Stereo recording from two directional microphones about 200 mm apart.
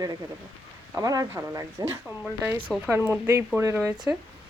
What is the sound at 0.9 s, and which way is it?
A woman's voice, 15° right (ahead or behind).